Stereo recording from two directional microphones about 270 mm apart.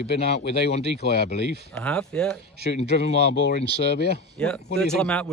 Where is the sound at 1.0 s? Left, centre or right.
Left.